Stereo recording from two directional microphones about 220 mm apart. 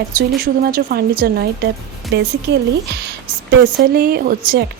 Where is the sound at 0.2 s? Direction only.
40° right (ahead or behind).